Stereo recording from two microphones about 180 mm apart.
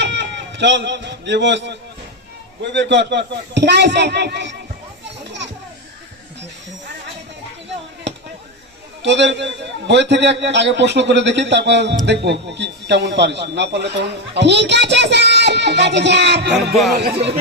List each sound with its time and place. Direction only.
0.0 s a sound: 80° right
2.7 s a man's voice: 75° right (ahead or behind)
9.0 s a man's voice: 80° right